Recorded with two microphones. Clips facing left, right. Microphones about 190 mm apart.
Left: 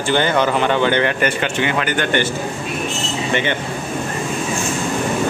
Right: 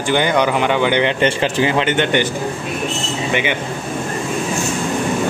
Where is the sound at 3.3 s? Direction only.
10° right (ahead or behind).